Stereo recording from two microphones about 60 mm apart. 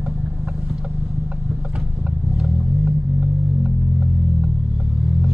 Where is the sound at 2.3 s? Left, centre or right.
Centre.